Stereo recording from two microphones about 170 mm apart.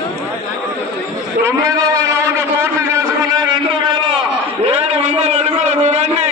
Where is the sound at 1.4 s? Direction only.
20° right (ahead or behind).